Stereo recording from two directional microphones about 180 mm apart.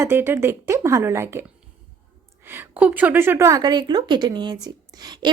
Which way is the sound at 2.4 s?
10° right (ahead or behind).